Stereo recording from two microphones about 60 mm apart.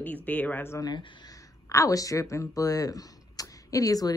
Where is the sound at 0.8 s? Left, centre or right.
Left.